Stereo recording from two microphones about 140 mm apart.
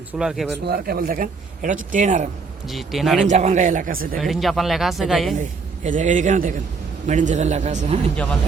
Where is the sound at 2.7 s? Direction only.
Centre (ahead or behind).